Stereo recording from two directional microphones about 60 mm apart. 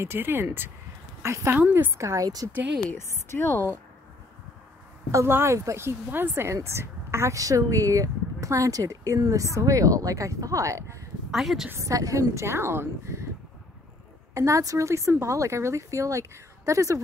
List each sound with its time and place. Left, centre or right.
0.0 s speech: right
1.2 s a woman's voice: right
1.5 s speech: right
2.0 s speech: right
3.0 s a woman's voice: left
5.1 s speech: right
11.3 s a woman's voice: centre
11.8 s a woman's voice: right
14.3 s speech: right
14.9 s speech: right